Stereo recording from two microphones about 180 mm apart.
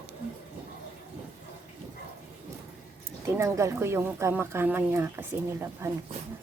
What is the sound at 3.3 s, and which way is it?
Speech, 15° right (ahead or behind).